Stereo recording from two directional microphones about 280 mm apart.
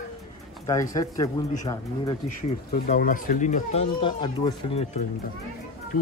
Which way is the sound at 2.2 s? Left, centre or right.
Left.